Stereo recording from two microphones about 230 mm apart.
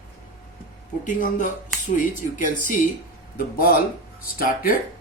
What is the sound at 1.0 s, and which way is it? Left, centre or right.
Speech, left.